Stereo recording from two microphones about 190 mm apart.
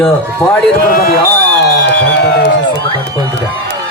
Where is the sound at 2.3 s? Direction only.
70° left (ahead or behind).